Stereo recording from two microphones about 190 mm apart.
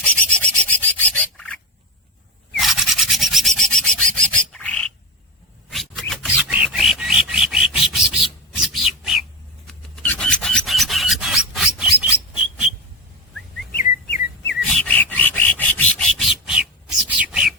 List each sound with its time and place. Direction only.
0.0 s rub: 5° left (ahead or behind)
2.6 s filing: centre (ahead or behind)
13.7 s chirp: 50° left (ahead or behind)
14.6 s rub: 5° left (ahead or behind)
17.1 s bird: 5° right (ahead or behind)